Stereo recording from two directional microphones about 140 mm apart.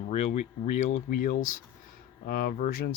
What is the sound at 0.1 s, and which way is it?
Speech, 50° left (ahead or behind).